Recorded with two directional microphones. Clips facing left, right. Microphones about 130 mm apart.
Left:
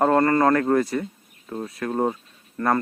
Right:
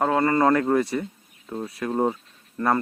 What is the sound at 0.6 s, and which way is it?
Speech, centre (ahead or behind).